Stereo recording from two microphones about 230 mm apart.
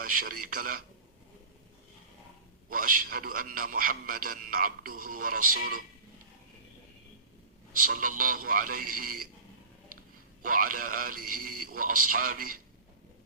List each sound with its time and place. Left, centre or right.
0.0 s a man's voice: right
2.6 s a man's voice: right
7.8 s a man's voice: right
10.4 s a man's voice: right